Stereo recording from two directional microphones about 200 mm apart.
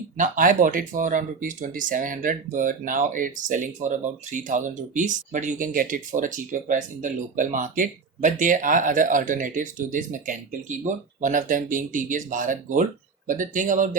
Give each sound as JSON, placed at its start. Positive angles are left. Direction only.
{"t": 0.2, "sound": "speech", "side_deg": -40}